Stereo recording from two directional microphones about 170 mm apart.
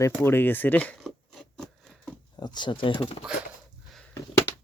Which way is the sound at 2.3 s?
25° left (ahead or behind).